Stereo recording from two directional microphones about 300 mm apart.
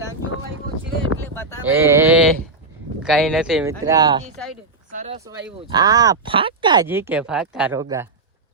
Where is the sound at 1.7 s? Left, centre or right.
Centre.